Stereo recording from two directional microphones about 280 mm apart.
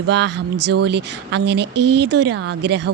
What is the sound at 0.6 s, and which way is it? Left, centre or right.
Speech, right.